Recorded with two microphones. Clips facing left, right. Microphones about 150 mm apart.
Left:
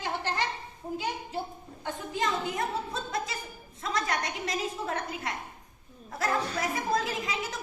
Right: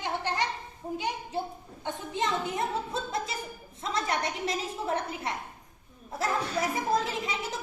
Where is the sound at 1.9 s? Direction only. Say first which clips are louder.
Even; 25° right (ahead or behind).